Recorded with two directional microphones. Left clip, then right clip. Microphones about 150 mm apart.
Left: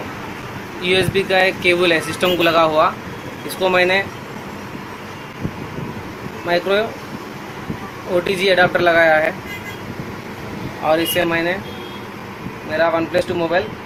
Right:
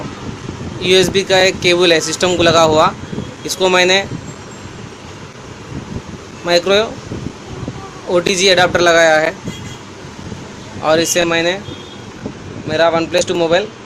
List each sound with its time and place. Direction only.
0.8 s speech: 60° right (ahead or behind)
6.5 s speech: 70° right (ahead or behind)
8.1 s speech: 70° right (ahead or behind)
10.8 s speech: 70° right (ahead or behind)
12.7 s speech: 75° right (ahead or behind)